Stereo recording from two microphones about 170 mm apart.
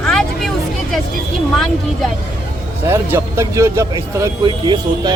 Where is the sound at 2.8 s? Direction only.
15° right (ahead or behind).